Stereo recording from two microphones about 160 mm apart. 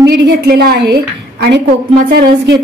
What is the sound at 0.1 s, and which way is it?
A woman's voice, 85° right.